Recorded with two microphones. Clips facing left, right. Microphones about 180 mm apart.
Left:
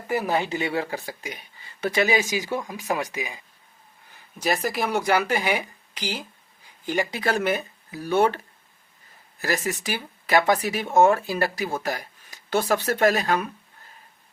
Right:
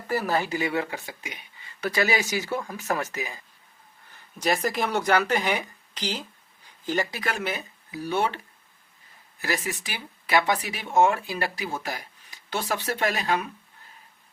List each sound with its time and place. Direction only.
0.1 s speech: 20° left (ahead or behind); by 1.4 s 40° left (ahead or behind)
1.8 s speech: 20° left (ahead or behind)
4.4 s speech: 5° left (ahead or behind)
7.2 s speech: 35° left (ahead or behind)
7.4 s speech: 50° left (ahead or behind)
9.4 s speech: 45° left (ahead or behind)